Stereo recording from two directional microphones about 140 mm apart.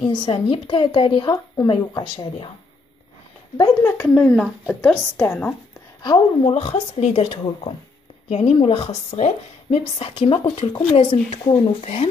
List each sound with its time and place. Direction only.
0.1 s a woman's voice: 35° left (ahead or behind)
3.5 s speech: 25° left (ahead or behind)
4.1 s a woman's voice: 5° left (ahead or behind)
6.0 s a woman's voice: 35° left (ahead or behind)
6.5 s a woman's voice: 50° left (ahead or behind)